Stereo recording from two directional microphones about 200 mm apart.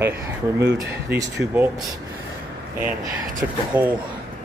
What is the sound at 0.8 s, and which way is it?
Speech, 15° right (ahead or behind).